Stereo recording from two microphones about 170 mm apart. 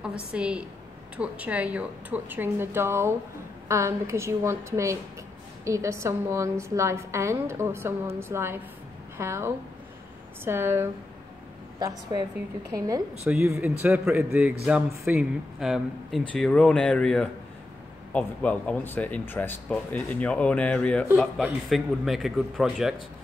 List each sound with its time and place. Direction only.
0.0 s a woman's voice: 5° right (ahead or behind)
12.7 s a woman's voice: 20° right (ahead or behind); by 23.0 s centre (ahead or behind)